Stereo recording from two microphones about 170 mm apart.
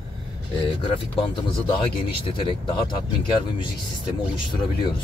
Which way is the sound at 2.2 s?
30° left (ahead or behind).